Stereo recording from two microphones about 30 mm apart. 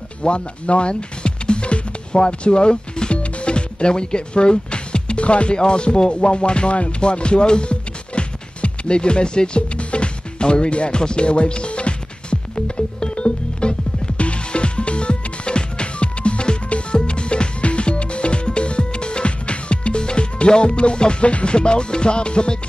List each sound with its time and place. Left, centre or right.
0.2 s music: left